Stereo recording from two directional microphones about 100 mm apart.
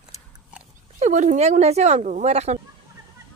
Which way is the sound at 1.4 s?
90° right.